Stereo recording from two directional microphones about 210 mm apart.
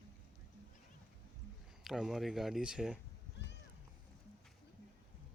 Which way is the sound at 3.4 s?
60° left (ahead or behind).